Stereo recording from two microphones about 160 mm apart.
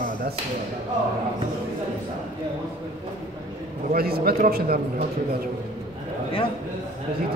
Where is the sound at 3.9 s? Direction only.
75° right (ahead or behind).